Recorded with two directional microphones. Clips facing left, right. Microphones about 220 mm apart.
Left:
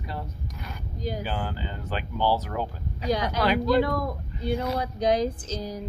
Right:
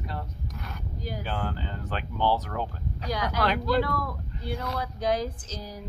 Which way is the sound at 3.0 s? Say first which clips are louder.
Left 4 dB; 20° left (ahead or behind).